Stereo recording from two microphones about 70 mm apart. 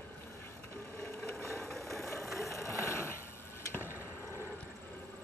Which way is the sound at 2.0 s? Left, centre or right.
Left.